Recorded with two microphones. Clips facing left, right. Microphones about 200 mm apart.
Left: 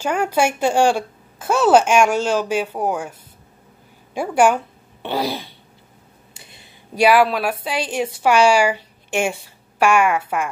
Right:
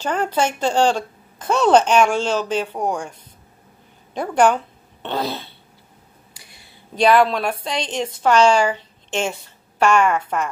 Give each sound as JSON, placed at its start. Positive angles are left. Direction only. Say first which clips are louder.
{"t": 0.0, "sound": "a woman's voice", "louder": "left 2 dB", "side_deg": 10}
{"t": 6.3, "sound": "a sound", "louder": "left 5 dB", "side_deg": 25}
{"t": 7.0, "sound": "a woman's voice", "louder": "even", "side_deg": 10}